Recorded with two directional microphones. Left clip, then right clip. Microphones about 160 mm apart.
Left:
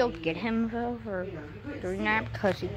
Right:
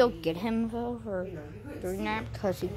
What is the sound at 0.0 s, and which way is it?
Speech, 20° right (ahead or behind).